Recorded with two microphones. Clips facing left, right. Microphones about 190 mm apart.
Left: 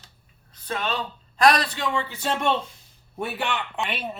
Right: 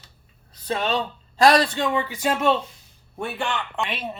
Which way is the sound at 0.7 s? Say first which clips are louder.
Right 4 dB; 30° right (ahead or behind).